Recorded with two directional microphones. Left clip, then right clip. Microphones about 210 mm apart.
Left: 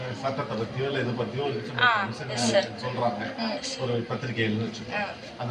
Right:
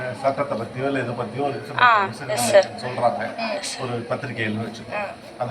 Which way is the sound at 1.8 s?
35° right (ahead or behind).